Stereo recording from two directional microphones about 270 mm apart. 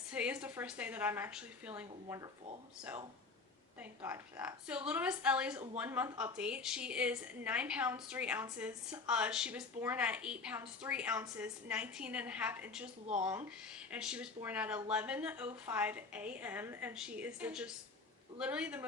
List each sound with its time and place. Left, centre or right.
0.1 s a woman's voice: centre